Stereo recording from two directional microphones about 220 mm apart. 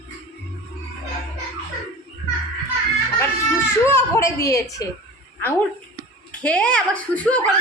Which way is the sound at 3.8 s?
15° left (ahead or behind).